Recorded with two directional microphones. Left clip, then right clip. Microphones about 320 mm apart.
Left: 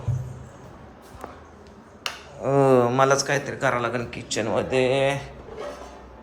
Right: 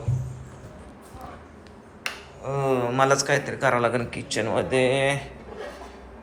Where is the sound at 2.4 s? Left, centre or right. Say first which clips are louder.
Left 8 dB; left.